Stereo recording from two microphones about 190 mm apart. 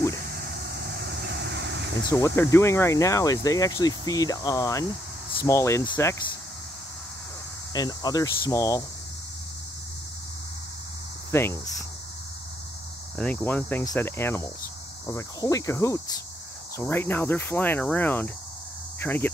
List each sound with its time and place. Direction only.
0.3 s vehicle: 55° right (ahead or behind)
2.0 s speech: 15° left (ahead or behind)
7.7 s speech: 20° left (ahead or behind)
11.3 s speech: 15° left (ahead or behind)
13.2 s speech: 10° left (ahead or behind)